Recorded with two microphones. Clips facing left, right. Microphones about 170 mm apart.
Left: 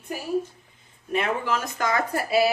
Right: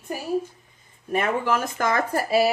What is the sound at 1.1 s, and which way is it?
Speech, 50° right (ahead or behind).